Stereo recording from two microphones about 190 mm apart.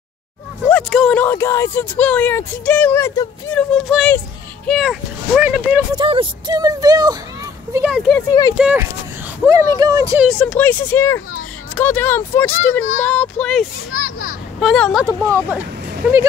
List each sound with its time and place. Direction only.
0.7 s speech: 5° left (ahead or behind)
5.9 s speech: 25° right (ahead or behind)
7.7 s speech: 5° right (ahead or behind)
8.3 s speech: 20° left (ahead or behind)
8.5 s speech: 5° right (ahead or behind)
9.5 s speech: 20° right (ahead or behind)
10.2 s speech: 5° left (ahead or behind)
13.9 s a child's voice: 45° left (ahead or behind)
14.6 s speech: centre (ahead or behind)
15.0 s speech: 15° right (ahead or behind)